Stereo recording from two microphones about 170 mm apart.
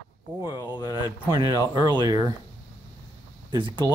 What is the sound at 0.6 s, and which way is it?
Speech, 25° left (ahead or behind).